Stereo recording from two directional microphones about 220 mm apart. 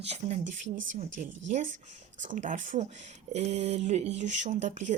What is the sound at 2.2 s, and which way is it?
A woman's voice, 35° right (ahead or behind).